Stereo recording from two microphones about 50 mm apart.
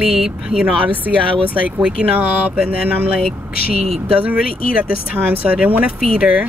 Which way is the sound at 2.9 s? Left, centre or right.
Right.